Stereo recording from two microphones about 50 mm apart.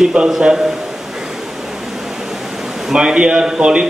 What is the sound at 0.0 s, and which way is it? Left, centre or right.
Speech, centre.